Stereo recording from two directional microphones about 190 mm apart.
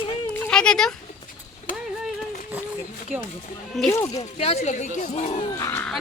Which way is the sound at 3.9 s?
15° left (ahead or behind).